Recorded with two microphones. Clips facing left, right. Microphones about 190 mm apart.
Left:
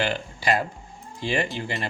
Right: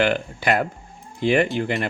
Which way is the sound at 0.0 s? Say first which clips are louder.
Right 5 dB; 55° right (ahead or behind).